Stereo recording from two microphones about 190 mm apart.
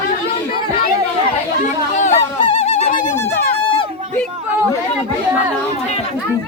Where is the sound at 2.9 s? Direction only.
40° left (ahead or behind).